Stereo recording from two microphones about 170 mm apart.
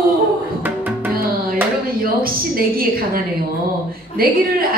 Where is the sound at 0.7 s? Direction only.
10° right (ahead or behind).